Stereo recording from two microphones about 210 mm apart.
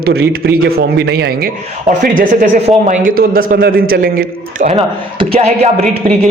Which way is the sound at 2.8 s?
40° right (ahead or behind).